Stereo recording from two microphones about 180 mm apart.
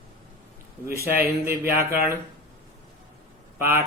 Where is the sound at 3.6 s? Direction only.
10° right (ahead or behind).